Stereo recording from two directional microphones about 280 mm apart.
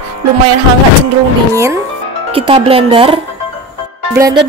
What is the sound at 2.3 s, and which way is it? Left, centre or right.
Speech, centre.